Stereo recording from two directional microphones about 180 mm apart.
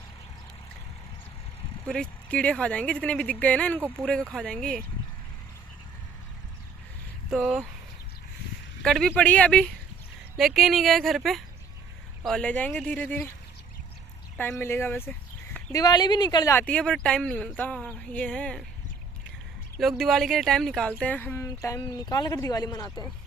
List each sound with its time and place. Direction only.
1.9 s speech: 5° left (ahead or behind)
7.2 s speech: 5° right (ahead or behind)
8.8 s speech: 5° left (ahead or behind)
14.3 s speech: 10° left (ahead or behind)
16.6 s speech: 5° left (ahead or behind)
19.8 s speech: centre (ahead or behind); by 23.0 s 20° left (ahead or behind)